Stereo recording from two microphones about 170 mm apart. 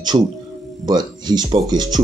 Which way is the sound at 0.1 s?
30° right (ahead or behind).